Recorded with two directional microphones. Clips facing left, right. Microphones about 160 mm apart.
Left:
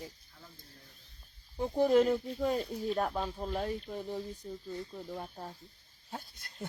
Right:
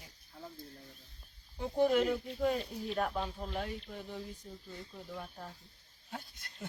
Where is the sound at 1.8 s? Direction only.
35° left (ahead or behind).